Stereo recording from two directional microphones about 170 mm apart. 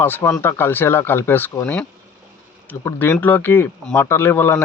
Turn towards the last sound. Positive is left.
turn(degrees=10)  # may be behind; listen again after turning